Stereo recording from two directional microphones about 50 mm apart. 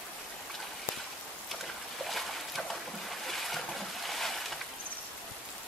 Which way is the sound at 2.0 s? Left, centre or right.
Centre.